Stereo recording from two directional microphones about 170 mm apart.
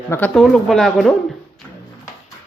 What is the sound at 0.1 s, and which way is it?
Speech, 10° left (ahead or behind).